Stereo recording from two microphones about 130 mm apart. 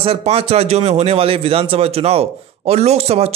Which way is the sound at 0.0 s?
50° right (ahead or behind).